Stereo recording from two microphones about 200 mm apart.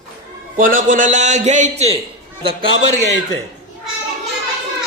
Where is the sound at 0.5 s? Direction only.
40° right (ahead or behind).